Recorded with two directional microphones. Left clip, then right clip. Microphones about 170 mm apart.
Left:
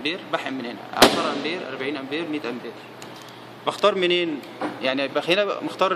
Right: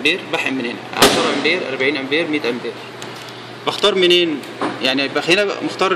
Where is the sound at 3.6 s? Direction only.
5° left (ahead or behind).